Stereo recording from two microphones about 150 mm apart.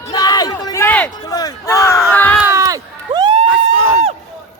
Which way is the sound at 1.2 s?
25° left (ahead or behind).